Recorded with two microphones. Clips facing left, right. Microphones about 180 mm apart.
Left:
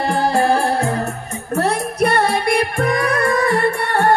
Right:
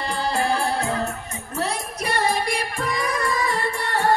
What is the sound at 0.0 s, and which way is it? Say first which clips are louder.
Music: left 7 dB; 55° left (ahead or behind).